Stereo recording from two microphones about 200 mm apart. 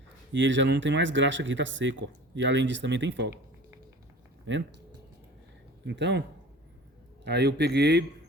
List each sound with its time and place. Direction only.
0.3 s speech: 65° right (ahead or behind)
4.5 s speech: 65° right (ahead or behind)
5.8 s speech: 60° right (ahead or behind)
7.3 s speech: 55° right (ahead or behind)